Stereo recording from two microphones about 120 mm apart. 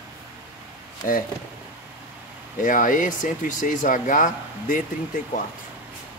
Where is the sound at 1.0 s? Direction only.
90° left.